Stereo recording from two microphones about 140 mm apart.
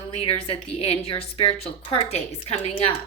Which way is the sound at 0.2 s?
45° left (ahead or behind).